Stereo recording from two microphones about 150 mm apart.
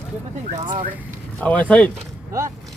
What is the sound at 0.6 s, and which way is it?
Speech, 30° right (ahead or behind).